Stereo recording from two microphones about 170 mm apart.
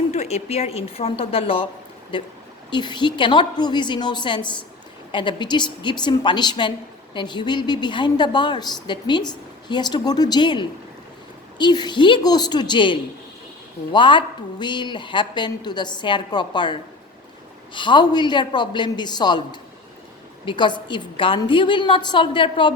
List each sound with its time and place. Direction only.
0.1 s a woman's voice: 40° left (ahead or behind)
17.7 s a woman's voice: 30° left (ahead or behind)